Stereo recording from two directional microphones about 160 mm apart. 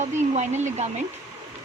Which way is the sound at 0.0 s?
45° right (ahead or behind).